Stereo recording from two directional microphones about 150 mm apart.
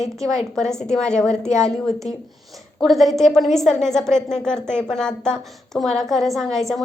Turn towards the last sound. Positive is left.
turn(degrees=0)  # may be behind; listen again after turning